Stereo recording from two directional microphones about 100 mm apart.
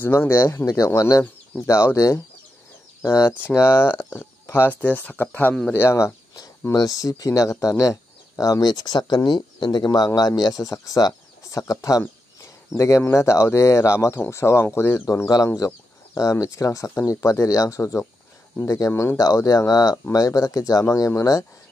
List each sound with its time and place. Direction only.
0.0 s speech: 20° left (ahead or behind)
19.1 s speech: 35° left (ahead or behind)